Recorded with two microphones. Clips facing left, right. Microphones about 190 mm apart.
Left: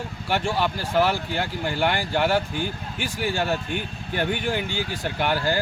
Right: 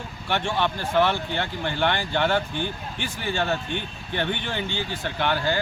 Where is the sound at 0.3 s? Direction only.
10° left (ahead or behind).